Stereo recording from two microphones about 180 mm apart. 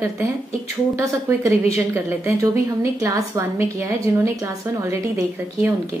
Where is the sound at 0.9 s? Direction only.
15° right (ahead or behind).